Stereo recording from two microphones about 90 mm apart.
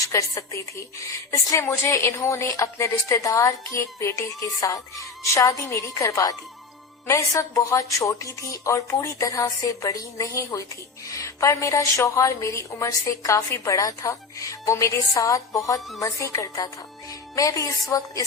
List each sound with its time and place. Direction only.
0.0 s a woman's voice: 35° left (ahead or behind)
5.2 s a woman's voice: 35° left (ahead or behind)